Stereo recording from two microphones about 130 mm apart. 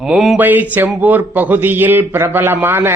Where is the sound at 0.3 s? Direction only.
15° right (ahead or behind).